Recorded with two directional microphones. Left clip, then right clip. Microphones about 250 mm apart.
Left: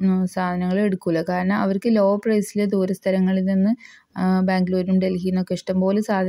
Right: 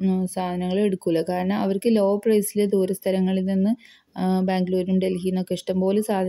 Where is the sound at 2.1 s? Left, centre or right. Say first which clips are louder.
Right 1 dB; centre.